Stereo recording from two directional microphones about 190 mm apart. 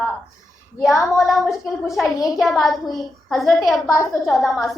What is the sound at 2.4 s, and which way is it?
A woman's voice, centre (ahead or behind).